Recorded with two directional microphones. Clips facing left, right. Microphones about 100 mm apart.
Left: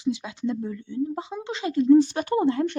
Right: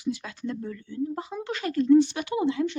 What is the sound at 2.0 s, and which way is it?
Speech, 40° left (ahead or behind).